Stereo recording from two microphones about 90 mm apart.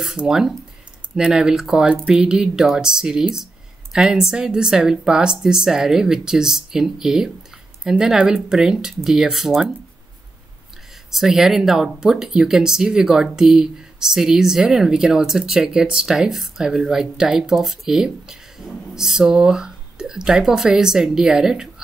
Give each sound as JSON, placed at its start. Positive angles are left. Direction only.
{"t": 0.0, "sound": "speech", "side_deg": -5}
{"t": 11.1, "sound": "speech", "side_deg": -5}